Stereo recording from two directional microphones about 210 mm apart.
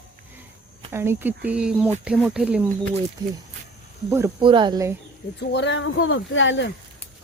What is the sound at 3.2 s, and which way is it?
Speech, 20° right (ahead or behind).